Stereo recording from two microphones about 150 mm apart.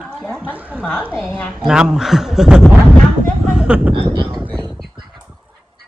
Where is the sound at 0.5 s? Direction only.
10° right (ahead or behind).